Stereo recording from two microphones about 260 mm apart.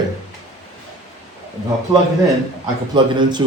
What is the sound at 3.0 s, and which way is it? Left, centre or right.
Speech, centre.